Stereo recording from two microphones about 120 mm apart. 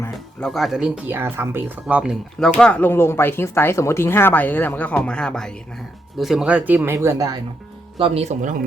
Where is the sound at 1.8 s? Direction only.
10° right (ahead or behind).